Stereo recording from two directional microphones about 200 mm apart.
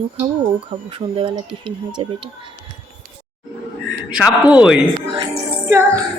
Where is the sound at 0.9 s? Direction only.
25° right (ahead or behind).